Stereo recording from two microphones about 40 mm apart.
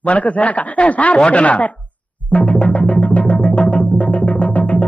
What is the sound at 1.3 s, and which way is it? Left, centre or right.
Music, left.